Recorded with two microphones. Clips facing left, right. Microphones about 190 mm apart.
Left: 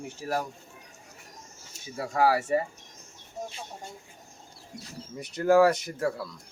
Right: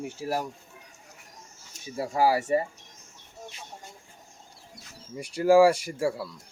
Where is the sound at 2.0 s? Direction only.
10° right (ahead or behind).